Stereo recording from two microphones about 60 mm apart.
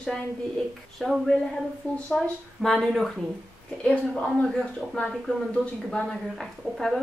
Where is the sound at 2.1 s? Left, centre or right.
Centre.